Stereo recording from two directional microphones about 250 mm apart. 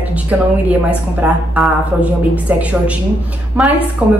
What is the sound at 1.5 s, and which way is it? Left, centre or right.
A woman's voice, centre.